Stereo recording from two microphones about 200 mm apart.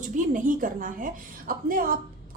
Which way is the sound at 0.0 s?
40° right (ahead or behind).